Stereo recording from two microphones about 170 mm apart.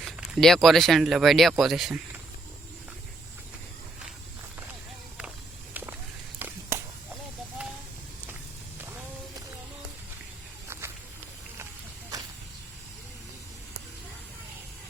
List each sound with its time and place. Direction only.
0.0 s speech: centre (ahead or behind)
6.4 s a sound: 15° right (ahead or behind)
10.7 s walk: 15° right (ahead or behind)